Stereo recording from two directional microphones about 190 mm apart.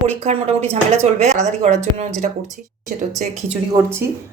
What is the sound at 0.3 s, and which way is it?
Speech, 35° right (ahead or behind).